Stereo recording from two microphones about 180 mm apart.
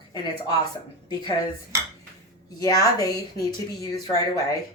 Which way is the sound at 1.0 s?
20° left (ahead or behind).